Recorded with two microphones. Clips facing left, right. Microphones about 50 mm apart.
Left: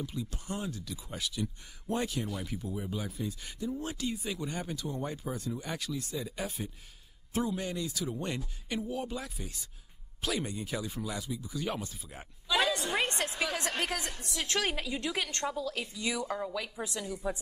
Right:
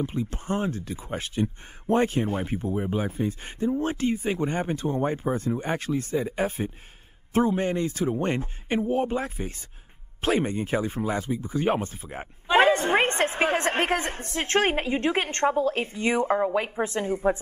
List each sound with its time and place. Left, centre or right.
0.0 s speech: right